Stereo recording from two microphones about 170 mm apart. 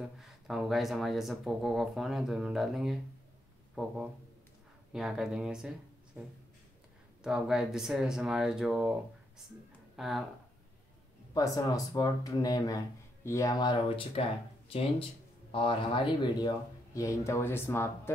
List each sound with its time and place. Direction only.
0.2 s speech: centre (ahead or behind)
7.2 s speech: 5° right (ahead or behind)
9.9 s speech: centre (ahead or behind)
11.3 s speech: 20° left (ahead or behind)